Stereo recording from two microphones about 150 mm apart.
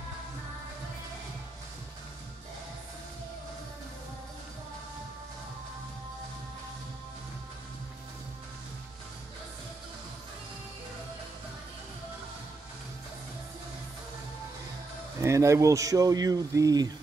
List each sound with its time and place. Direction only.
15.2 s speech: 20° right (ahead or behind)